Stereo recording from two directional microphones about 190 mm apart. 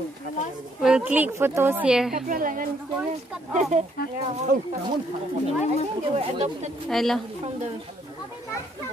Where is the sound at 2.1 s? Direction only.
45° right (ahead or behind).